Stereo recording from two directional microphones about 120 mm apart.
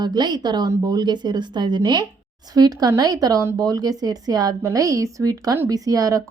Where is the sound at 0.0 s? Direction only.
35° right (ahead or behind).